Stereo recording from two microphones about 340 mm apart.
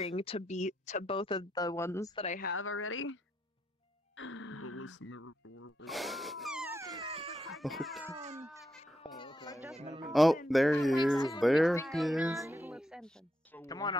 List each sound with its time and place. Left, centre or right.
0.0 s speech: centre
2.5 s speech: left
4.2 s speech: left
5.9 s wail: centre
7.5 s speech: centre
8.2 s speech: centre
9.0 s baby cry: centre
9.8 s speech: centre
10.0 s speech: centre
11.1 s speech: centre
11.4 s speech: centre